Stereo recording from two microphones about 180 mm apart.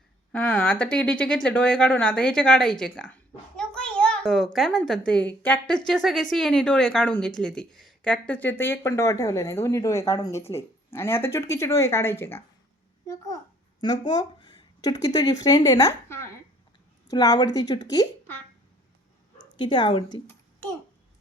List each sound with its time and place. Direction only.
0.3 s speech: 5° left (ahead or behind)
3.6 s a sound: 5° left (ahead or behind)
4.5 s a woman's voice: centre (ahead or behind)
14.1 s a woman's voice: 20° left (ahead or behind)
19.5 s a woman's voice: 25° left (ahead or behind)